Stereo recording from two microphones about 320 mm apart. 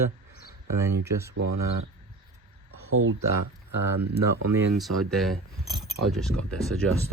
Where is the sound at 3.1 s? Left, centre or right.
Right.